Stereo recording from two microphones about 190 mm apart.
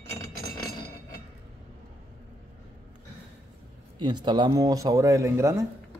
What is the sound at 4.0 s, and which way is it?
Speech, 25° right (ahead or behind).